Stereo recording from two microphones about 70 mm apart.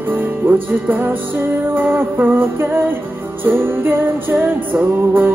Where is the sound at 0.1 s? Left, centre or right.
Right.